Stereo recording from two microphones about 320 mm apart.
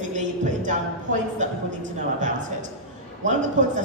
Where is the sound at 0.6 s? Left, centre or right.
Right.